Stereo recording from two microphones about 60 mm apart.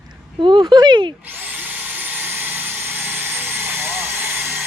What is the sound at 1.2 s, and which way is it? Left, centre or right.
Tools, right.